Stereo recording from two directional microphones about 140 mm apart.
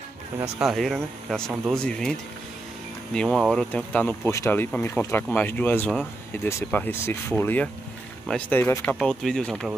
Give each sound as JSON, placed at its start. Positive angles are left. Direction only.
{"t": 0.6, "sound": "speech", "side_deg": 0}
{"t": 8.9, "sound": "speech", "side_deg": 5}